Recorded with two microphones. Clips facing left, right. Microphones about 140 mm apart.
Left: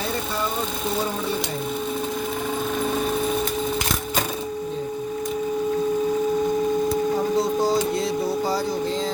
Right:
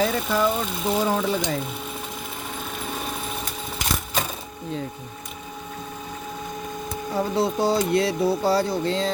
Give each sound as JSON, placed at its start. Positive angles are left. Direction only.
{"t": 7.9, "sound": "music", "side_deg": -65}